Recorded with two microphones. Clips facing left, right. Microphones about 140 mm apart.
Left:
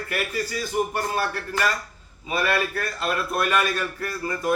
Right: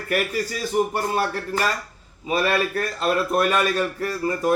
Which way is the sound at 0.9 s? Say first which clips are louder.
Right 3 dB; 30° right (ahead or behind).